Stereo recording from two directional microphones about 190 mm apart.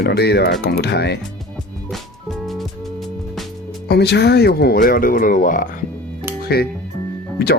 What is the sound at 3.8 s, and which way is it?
Speech, 60° left (ahead or behind).